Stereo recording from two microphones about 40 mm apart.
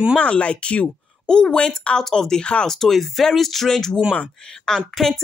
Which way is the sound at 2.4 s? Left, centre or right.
Left.